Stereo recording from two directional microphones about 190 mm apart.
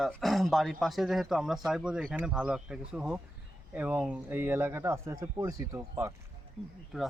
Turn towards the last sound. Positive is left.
turn(degrees=0)  # may be behind; listen again after turning